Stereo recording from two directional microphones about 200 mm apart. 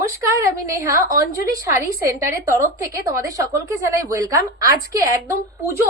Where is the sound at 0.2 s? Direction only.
15° right (ahead or behind).